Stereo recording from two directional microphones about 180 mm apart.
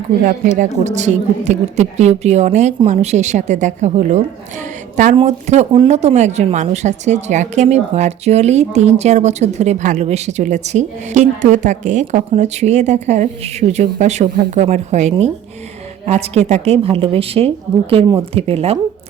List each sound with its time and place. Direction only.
0.2 s speech: 45° right (ahead or behind)